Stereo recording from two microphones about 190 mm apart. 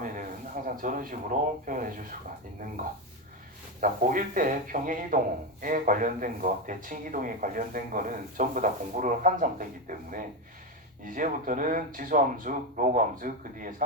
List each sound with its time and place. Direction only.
0.8 s a man's voice: 45° right (ahead or behind)
3.8 s a man's voice: 45° right (ahead or behind)